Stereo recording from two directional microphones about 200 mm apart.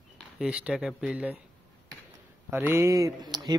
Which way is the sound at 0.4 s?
5° right (ahead or behind).